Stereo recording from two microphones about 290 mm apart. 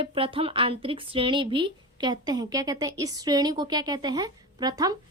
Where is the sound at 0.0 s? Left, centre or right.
Centre.